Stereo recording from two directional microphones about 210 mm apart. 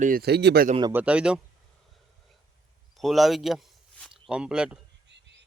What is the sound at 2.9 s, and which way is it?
Speech, centre (ahead or behind).